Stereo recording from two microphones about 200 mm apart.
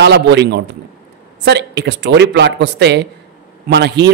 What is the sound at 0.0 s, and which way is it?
Speech, 60° right (ahead or behind).